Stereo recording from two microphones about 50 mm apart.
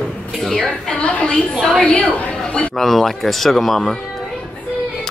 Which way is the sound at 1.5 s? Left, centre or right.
Centre.